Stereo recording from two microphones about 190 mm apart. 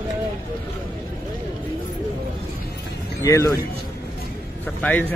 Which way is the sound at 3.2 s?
15° left (ahead or behind).